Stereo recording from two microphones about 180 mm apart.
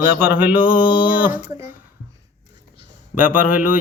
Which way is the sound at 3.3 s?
50° left (ahead or behind).